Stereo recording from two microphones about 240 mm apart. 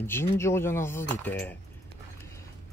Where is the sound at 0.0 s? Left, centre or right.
Centre.